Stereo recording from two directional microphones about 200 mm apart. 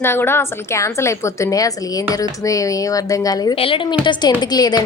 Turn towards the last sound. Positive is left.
turn(degrees=20)  # may be behind; listen again after turning